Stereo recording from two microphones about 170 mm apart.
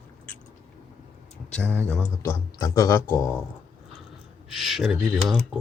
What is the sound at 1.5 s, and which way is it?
Speech, 10° left (ahead or behind).